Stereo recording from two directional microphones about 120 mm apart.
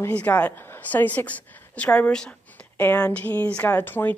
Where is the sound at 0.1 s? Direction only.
10° left (ahead or behind).